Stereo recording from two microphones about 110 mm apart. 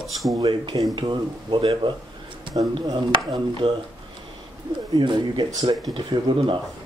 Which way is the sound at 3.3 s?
50° right (ahead or behind).